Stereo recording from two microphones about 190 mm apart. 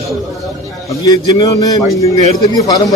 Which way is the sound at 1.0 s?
20° left (ahead or behind).